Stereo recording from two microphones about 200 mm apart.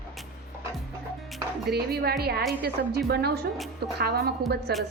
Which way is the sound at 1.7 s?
50° right (ahead or behind).